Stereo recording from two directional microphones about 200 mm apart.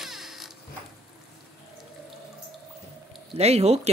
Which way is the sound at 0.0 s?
Centre (ahead or behind).